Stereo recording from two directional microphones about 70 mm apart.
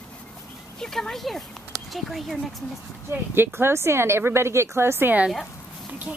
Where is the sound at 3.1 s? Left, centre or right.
Right.